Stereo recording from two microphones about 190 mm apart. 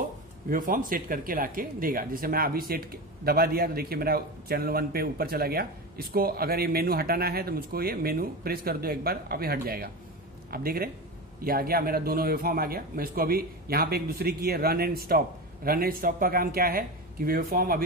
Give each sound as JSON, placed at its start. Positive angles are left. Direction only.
{"t": 0.5, "sound": "speech", "side_deg": -45}